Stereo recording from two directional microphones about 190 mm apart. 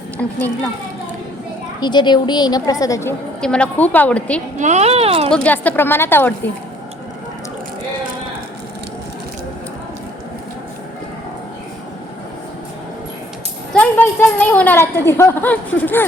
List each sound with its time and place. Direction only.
0.2 s a woman's voice: 10° left (ahead or behind)
1.8 s a woman's voice: 25° left (ahead or behind); by 4.4 s 5° left (ahead or behind)
4.6 s speech: 35° right (ahead or behind)
5.3 s a woman's voice: 5° left (ahead or behind)
13.7 s a woman's voice: 10° left (ahead or behind)